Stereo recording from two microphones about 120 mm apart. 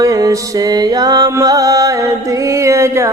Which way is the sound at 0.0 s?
30° right (ahead or behind).